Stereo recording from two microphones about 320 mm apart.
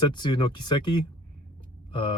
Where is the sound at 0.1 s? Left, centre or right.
Centre.